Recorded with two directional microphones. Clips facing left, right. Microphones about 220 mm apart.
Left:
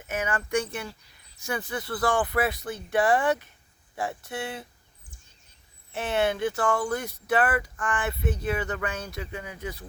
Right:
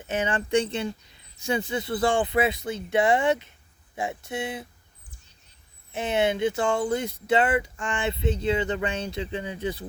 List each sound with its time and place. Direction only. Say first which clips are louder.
0.0 s speech: right 3 dB; 30° right (ahead or behind)
5.9 s speech: right 2 dB; 20° right (ahead or behind)